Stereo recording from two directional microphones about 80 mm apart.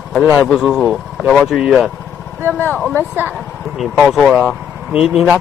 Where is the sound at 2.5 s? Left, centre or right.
Left.